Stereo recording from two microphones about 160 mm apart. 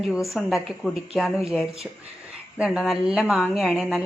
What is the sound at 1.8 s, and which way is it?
Speech, 10° right (ahead or behind).